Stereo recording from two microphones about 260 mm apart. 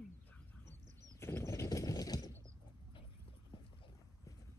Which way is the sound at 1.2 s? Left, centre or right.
Centre.